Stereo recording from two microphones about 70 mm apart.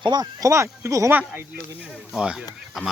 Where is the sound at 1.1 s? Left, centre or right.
Right.